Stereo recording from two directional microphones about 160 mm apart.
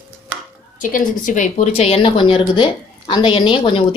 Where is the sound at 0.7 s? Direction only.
55° left (ahead or behind).